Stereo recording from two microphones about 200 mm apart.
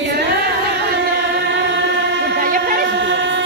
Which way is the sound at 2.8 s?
60° right (ahead or behind).